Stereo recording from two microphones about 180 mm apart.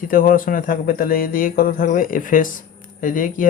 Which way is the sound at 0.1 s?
50° left (ahead or behind).